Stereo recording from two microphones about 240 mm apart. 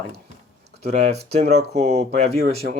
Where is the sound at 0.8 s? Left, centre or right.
Right.